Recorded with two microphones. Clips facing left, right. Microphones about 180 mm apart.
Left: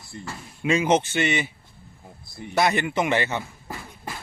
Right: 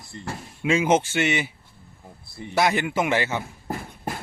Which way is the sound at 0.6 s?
10° right (ahead or behind).